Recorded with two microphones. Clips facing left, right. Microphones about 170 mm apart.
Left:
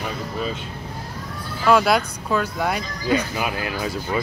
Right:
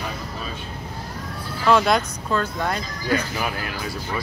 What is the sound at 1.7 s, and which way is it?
Speech, 5° left (ahead or behind).